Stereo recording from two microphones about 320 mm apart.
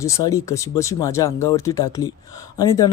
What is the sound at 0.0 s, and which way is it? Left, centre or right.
Speech, centre.